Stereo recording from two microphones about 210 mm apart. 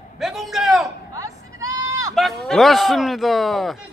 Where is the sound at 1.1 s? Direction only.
15° right (ahead or behind).